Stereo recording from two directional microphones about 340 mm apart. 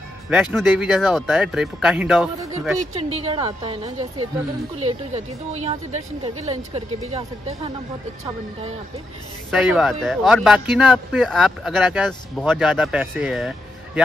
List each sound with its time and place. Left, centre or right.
0.3 s speech: centre
2.8 s a woman's voice: centre
9.5 s speech: centre